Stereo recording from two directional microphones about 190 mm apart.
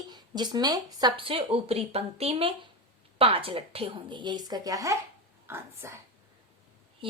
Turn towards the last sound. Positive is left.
turn(degrees=-30)  # may be behind; listen again after turning